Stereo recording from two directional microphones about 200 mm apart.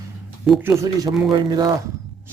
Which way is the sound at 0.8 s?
20° right (ahead or behind).